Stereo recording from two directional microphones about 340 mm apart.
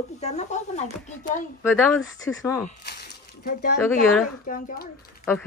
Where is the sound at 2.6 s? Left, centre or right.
Left.